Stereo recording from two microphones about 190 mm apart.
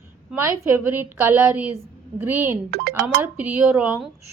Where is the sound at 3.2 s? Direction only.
10° right (ahead or behind).